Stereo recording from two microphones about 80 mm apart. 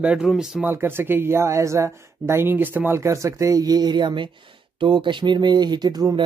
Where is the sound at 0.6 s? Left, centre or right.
Right.